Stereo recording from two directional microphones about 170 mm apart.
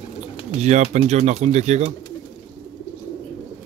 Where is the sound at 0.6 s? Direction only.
40° right (ahead or behind).